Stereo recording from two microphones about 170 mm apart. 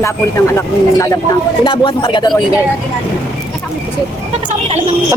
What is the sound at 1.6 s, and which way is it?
Speech, 30° left (ahead or behind).